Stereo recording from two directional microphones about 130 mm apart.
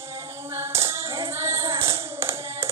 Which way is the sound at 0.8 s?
20° right (ahead or behind).